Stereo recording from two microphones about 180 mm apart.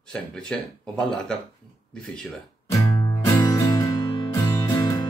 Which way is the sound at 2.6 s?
20° left (ahead or behind).